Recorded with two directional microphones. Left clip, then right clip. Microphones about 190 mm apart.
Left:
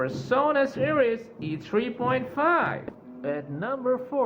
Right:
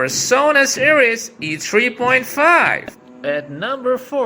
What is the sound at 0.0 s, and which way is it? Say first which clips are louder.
Speech: right 9 dB; 25° right (ahead or behind).